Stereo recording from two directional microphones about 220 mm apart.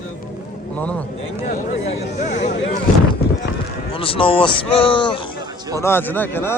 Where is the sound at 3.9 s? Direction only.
25° left (ahead or behind).